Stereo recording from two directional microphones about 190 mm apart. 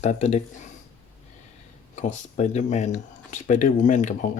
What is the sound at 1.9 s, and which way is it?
Speech, 40° left (ahead or behind).